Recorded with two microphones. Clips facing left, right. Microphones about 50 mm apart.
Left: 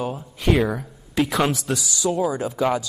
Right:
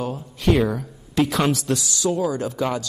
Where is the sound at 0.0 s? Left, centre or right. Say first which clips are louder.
Right 1 dB; centre.